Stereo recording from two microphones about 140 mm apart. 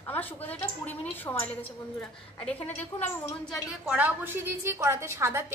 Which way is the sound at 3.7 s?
10° right (ahead or behind).